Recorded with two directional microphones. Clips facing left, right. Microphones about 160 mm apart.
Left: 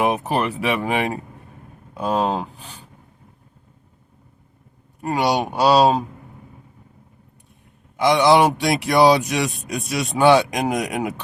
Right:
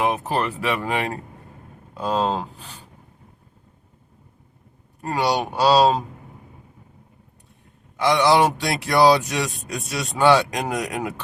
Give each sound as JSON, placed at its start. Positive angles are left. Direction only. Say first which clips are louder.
{"t": 0.0, "sound": "speech", "louder": "left 2 dB", "side_deg": 20}
{"t": 4.9, "sound": "speech", "louder": "left 2 dB", "side_deg": 15}
{"t": 7.9, "sound": "speech", "louder": "left 2 dB", "side_deg": 15}